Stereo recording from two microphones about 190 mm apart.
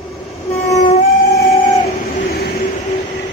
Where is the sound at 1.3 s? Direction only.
60° left (ahead or behind).